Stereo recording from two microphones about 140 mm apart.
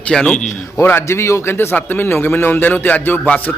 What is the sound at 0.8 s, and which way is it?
A man's voice, 15° left (ahead or behind).